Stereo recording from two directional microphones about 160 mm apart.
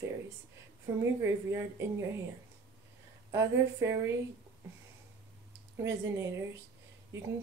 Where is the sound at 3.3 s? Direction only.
20° right (ahead or behind).